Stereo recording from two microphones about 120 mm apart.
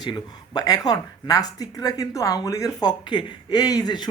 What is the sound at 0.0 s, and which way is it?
Speech, 35° left (ahead or behind).